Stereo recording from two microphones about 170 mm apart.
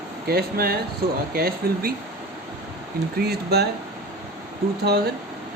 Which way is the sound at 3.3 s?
70° right (ahead or behind).